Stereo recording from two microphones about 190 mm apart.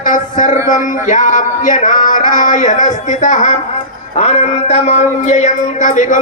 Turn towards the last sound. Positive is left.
turn(degrees=40)  # may be behind; listen again after turning